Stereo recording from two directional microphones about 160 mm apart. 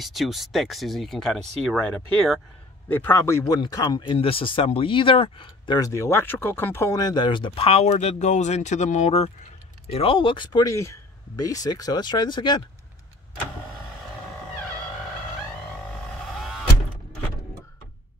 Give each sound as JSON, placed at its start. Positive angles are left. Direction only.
{"t": 0.0, "sound": "speech", "side_deg": 0}
{"t": 2.9, "sound": "speech", "side_deg": 15}